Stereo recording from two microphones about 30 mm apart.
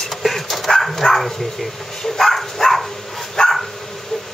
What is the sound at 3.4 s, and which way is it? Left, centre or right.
Dog, left.